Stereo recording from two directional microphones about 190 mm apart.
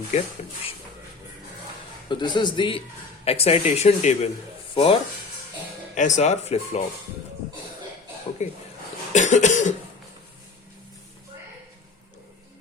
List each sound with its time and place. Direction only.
0.1 s speech: 40° left (ahead or behind)
2.0 s a man's voice: 25° left (ahead or behind)
5.9 s speech: 40° left (ahead or behind)
8.4 s speech: 35° left (ahead or behind)